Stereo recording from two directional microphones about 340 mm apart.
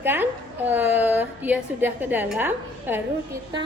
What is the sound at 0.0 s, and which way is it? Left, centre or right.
A woman's voice, centre.